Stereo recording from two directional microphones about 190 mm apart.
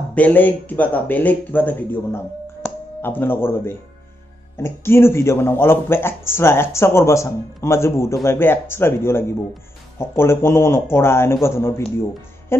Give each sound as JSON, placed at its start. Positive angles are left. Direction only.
{"t": 0.1, "sound": "speech", "side_deg": 10}